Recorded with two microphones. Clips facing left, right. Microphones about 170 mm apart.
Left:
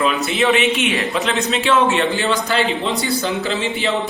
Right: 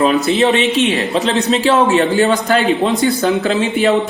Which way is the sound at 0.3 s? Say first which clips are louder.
Right 3 dB; 35° right (ahead or behind).